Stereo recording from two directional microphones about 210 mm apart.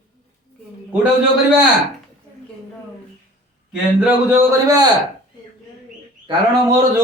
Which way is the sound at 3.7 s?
5° right (ahead or behind).